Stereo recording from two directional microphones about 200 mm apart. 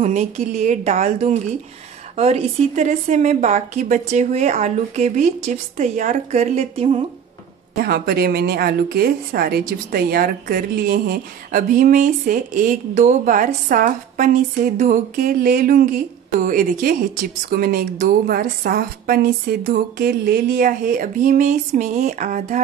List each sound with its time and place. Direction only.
0.0 s a woman's voice: 35° right (ahead or behind)
7.7 s a woman's voice: 50° right (ahead or behind)